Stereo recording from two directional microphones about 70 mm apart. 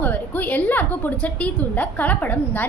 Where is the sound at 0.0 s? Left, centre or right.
Left.